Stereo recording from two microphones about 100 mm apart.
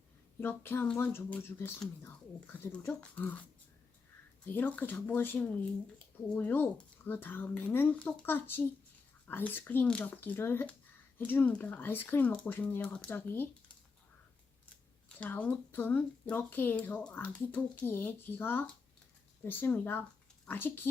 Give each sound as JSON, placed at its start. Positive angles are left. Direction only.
{"t": 0.3, "sound": "speech", "side_deg": 20}
{"t": 4.4, "sound": "speech", "side_deg": 20}
{"t": 15.1, "sound": "speech", "side_deg": 15}